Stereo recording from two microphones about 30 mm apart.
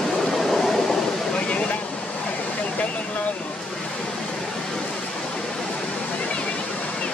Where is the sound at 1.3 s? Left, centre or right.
Left.